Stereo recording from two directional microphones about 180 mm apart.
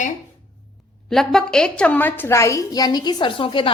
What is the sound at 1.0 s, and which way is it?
A woman's voice, centre (ahead or behind).